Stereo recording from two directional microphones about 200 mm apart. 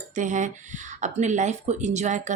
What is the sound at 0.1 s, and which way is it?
Speech, 40° right (ahead or behind).